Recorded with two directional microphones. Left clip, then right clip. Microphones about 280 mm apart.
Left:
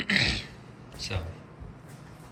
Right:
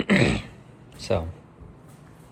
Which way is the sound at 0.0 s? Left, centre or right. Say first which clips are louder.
Right 3 dB; right.